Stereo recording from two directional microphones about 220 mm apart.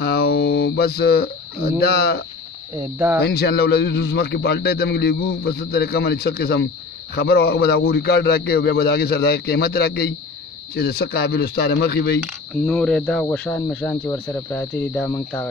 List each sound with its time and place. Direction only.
0.0 s a sound: 45° left (ahead or behind)
2.7 s speech: 10° right (ahead or behind)
3.2 s a man's voice: 45° left (ahead or behind)
12.6 s speech: 5° left (ahead or behind)